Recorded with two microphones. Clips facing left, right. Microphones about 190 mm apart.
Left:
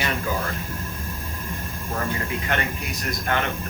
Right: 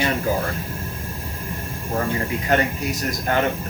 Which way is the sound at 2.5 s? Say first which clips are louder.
Right 10 dB; 40° right (ahead or behind).